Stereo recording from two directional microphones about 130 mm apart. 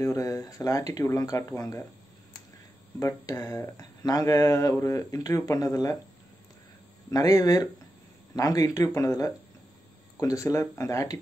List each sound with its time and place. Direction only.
0.0 s speech: 25° left (ahead or behind)
3.0 s speech: 25° left (ahead or behind)
7.1 s speech: 25° left (ahead or behind)